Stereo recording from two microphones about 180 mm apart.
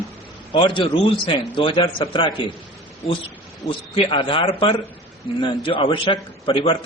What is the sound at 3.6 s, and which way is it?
A man's voice, 30° left (ahead or behind).